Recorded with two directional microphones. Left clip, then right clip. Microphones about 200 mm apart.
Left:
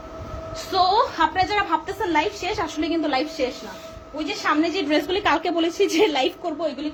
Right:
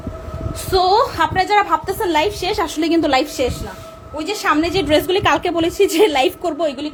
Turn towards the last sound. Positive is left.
turn(degrees=-55)  # may be behind; listen again after turning